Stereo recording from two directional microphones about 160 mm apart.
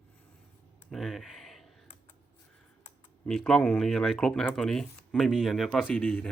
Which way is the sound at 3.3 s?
5° left (ahead or behind).